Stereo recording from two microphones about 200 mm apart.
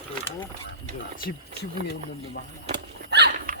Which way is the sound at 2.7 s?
55° right (ahead or behind).